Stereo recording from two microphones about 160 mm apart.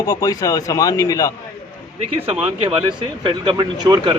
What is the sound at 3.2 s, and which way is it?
Speech, 30° right (ahead or behind).